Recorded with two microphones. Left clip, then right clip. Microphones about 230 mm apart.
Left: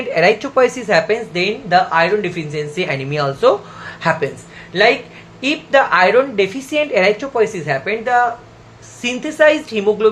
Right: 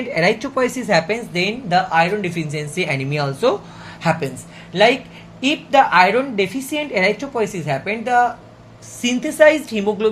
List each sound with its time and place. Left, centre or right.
0.1 s speech: centre